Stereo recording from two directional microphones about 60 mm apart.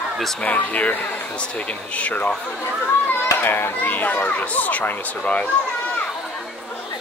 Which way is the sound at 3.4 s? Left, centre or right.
Left.